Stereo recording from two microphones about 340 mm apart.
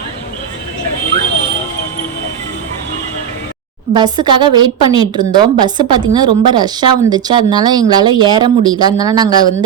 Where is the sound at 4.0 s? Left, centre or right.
Centre.